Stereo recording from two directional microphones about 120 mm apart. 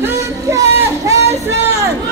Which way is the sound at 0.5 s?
25° right (ahead or behind).